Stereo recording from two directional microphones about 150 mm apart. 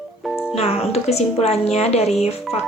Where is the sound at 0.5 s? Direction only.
45° left (ahead or behind).